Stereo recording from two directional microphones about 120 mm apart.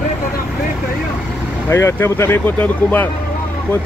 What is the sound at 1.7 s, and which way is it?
Speech, 20° left (ahead or behind).